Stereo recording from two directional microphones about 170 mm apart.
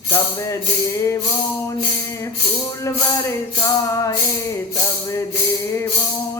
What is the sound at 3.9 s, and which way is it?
Music, 20° left (ahead or behind).